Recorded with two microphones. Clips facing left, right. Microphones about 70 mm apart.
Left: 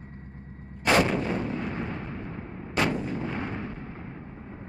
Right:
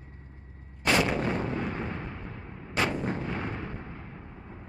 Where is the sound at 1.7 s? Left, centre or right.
Centre.